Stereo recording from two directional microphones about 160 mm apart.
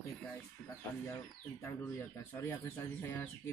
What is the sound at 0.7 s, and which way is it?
Speech, 15° left (ahead or behind).